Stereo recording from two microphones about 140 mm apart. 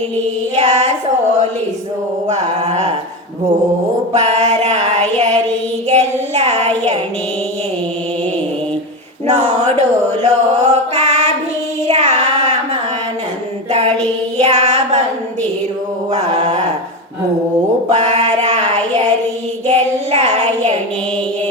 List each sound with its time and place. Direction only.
0.5 s music: 50° right (ahead or behind)
2.2 s music: 55° right (ahead or behind)
4.1 s music: 55° right (ahead or behind)
5.9 s child singing: 50° right (ahead or behind)
9.2 s a sound: 55° right (ahead or behind)
10.2 s mantra: 50° right (ahead or behind)
11.9 s child singing: 50° right (ahead or behind)
13.7 s child singing: 50° right (ahead or behind)
16.1 s a sound: 55° right (ahead or behind)
17.9 s child singing: 55° right (ahead or behind)